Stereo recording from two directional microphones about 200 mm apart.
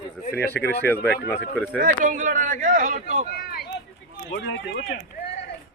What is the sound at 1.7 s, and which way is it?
Speech, 40° right (ahead or behind).